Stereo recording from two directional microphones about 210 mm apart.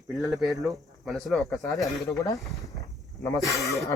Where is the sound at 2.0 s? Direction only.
15° left (ahead or behind).